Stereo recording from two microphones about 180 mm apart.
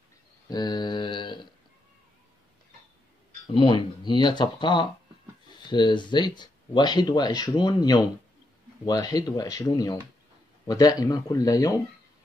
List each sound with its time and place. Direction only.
0.5 s mantra: 25° left (ahead or behind)
3.4 s speech: 25° left (ahead or behind)